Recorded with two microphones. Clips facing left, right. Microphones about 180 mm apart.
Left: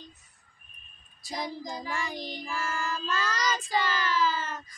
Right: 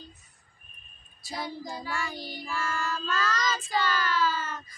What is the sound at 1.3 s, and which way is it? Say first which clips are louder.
Child singing: left 1 dB; 15° left (ahead or behind).